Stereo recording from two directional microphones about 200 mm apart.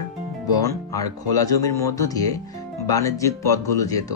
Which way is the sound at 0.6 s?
15° left (ahead or behind).